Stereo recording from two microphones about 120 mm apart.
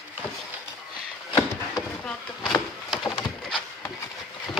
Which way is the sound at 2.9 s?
5° left (ahead or behind).